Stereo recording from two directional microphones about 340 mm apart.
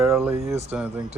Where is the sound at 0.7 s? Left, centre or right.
Centre.